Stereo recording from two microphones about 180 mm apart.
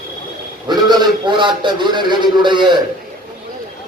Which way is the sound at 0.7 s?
25° right (ahead or behind).